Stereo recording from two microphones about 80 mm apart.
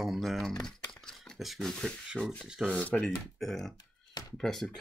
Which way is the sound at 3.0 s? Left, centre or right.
Centre.